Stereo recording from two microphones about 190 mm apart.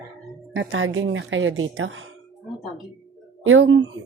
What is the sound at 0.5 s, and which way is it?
Speech, 85° right.